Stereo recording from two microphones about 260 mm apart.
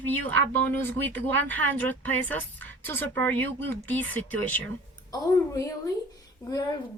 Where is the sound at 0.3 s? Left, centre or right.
Centre.